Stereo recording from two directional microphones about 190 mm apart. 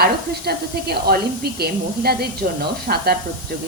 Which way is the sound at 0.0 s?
55° right (ahead or behind).